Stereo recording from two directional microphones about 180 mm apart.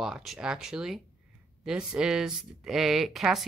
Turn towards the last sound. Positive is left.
turn(degrees=0)  # may be behind; listen again after turning